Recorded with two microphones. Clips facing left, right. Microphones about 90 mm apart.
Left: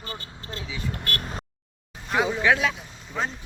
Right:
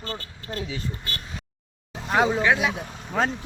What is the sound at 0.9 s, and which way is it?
Speech, 60° left (ahead or behind).